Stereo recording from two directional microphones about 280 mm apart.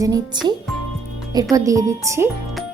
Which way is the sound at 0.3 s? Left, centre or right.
Centre.